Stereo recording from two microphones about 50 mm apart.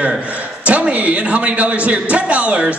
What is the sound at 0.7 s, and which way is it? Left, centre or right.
A man's voice, right.